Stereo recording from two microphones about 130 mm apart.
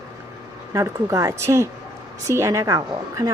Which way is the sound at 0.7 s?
25° right (ahead or behind).